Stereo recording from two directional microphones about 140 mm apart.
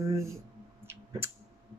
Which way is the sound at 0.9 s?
15° right (ahead or behind).